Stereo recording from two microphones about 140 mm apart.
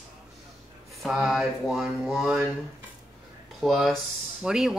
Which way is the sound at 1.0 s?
5° right (ahead or behind).